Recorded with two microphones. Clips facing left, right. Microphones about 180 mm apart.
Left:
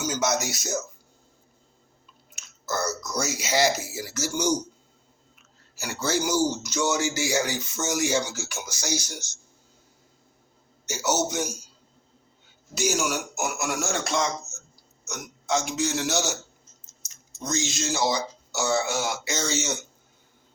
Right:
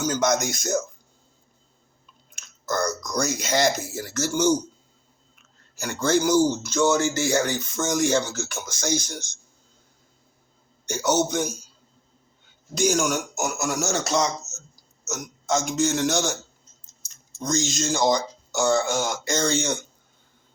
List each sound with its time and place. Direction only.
0.0 s a man's voice: 5° left (ahead or behind)
2.3 s speech: 5° left (ahead or behind)
10.8 s speech: 5° left (ahead or behind)
12.7 s a man's voice: 5° left (ahead or behind)
17.4 s a man's voice: 5° left (ahead or behind)